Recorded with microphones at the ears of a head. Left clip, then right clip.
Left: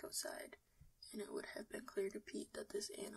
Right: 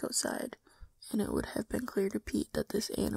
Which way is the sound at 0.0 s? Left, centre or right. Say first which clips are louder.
Right 13 dB; right.